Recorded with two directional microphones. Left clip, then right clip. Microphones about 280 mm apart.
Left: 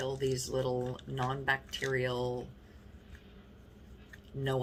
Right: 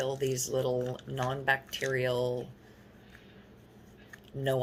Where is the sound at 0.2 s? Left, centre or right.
Right.